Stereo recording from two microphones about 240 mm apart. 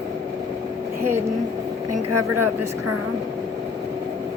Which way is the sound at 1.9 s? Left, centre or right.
Right.